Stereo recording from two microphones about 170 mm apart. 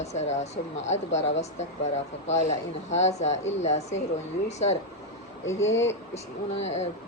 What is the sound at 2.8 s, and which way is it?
Speech, 40° left (ahead or behind).